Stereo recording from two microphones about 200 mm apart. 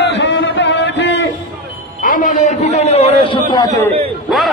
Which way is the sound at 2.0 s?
40° left (ahead or behind).